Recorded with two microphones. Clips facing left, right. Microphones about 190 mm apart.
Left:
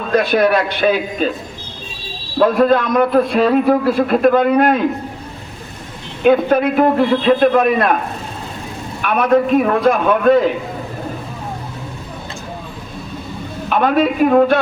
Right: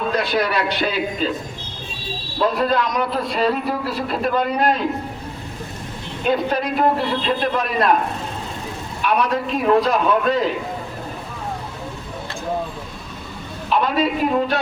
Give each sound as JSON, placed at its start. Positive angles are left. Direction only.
{"t": 0.2, "sound": "a man's voice", "side_deg": 55}
{"t": 2.4, "sound": "a man's voice", "side_deg": 55}
{"t": 6.2, "sound": "a man's voice", "side_deg": 55}
{"t": 9.0, "sound": "a man's voice", "side_deg": 55}
{"t": 13.7, "sound": "a man's voice", "side_deg": 55}